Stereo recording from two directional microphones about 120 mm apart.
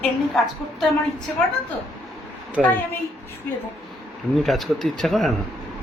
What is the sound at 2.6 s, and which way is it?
Speech, centre (ahead or behind).